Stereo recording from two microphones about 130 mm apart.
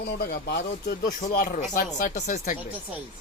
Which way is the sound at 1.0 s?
85° left.